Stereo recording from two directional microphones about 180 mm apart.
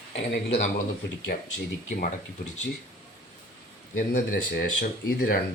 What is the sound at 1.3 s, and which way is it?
Speech, 55° left (ahead or behind).